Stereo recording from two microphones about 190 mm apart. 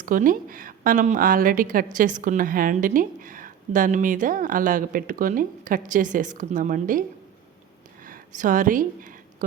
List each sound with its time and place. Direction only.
0.0 s a woman's voice: 45° right (ahead or behind)
8.0 s speech: 45° right (ahead or behind)